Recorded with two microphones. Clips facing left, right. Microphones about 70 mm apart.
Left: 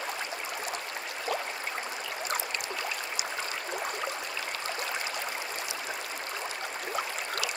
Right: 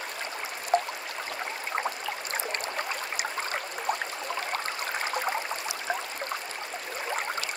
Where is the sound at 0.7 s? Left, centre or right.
Right.